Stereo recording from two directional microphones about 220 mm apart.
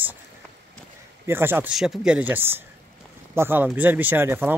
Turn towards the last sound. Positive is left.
turn(degrees=-10)  # may be behind; listen again after turning